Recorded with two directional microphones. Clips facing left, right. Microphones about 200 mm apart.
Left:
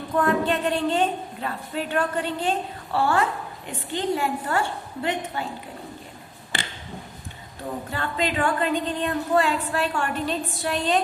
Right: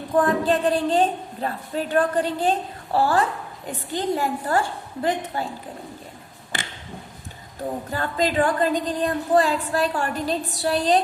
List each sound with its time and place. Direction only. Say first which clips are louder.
0.2 s a woman's voice: right 2 dB; 35° right (ahead or behind)
7.9 s a woman's voice: right 3 dB; 40° right (ahead or behind)